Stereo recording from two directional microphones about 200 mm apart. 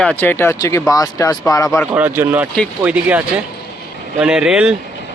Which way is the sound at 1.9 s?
10° right (ahead or behind).